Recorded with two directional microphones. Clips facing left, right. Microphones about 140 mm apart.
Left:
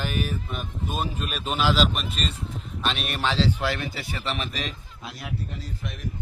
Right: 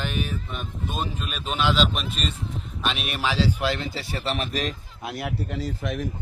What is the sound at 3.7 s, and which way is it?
Speech, 20° right (ahead or behind).